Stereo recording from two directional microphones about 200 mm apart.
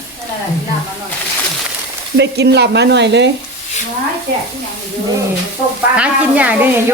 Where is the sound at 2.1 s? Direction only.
55° right (ahead or behind).